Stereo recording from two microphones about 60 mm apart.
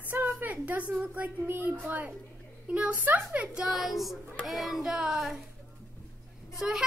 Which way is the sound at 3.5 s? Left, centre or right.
Centre.